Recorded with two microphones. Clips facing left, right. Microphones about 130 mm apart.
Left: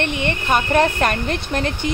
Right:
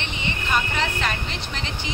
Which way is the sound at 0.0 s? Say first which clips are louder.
Left 8 dB; 60° left (ahead or behind).